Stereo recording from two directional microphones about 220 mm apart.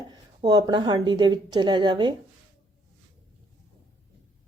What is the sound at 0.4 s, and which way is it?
A woman's voice, 20° right (ahead or behind).